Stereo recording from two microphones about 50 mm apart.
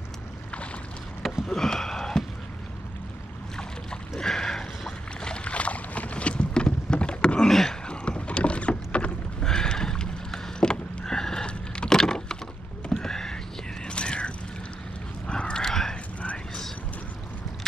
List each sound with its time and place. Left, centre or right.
1.5 s sniff: centre
4.2 s boat: centre
7.9 s rowboat: left
9.4 s a sound: centre
13.8 s mechanisms: left
15.2 s a sound: centre